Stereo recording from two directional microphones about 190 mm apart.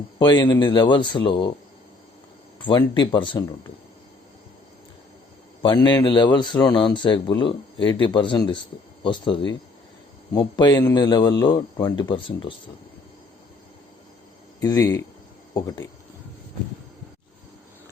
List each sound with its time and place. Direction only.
0.2 s speech: 25° left (ahead or behind)
2.6 s speech: 25° left (ahead or behind)
5.6 s speech: 20° left (ahead or behind)
14.6 s speech: 20° left (ahead or behind)